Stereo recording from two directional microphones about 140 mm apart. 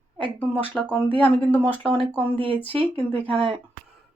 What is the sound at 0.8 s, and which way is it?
Speech, 10° left (ahead or behind).